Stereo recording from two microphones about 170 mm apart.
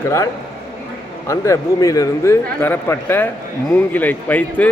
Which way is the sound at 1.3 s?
15° left (ahead or behind).